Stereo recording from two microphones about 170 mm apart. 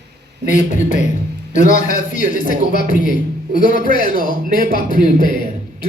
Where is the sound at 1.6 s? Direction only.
50° left (ahead or behind).